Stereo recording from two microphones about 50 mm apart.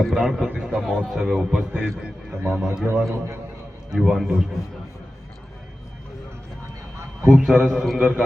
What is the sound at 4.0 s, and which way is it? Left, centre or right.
Speech, centre.